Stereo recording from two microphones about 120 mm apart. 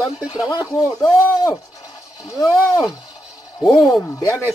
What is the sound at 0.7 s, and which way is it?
Speech, 35° left (ahead or behind).